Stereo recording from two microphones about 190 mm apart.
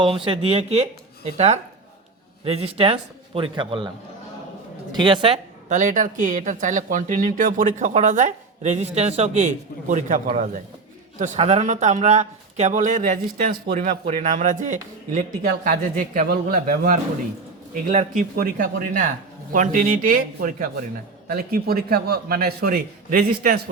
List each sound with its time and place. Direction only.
0.0 s a man's voice: 30° right (ahead or behind)
5.6 s speech: 40° right (ahead or behind)
14.0 s speech: 35° right (ahead or behind)
18.2 s speech: 45° right (ahead or behind)